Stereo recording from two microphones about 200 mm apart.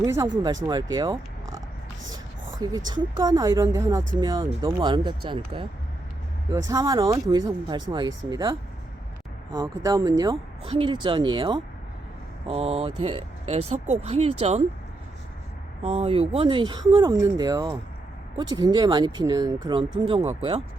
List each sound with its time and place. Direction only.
0.0 s speech: 15° right (ahead or behind)
6.7 s speech: 15° right (ahead or behind)
15.8 s speech: 30° right (ahead or behind)